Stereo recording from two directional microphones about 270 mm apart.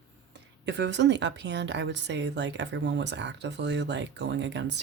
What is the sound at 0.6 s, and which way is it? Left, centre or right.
A woman's voice, right.